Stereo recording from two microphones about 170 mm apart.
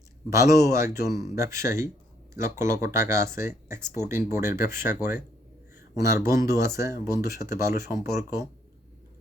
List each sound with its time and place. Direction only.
0.3 s speech: 20° right (ahead or behind)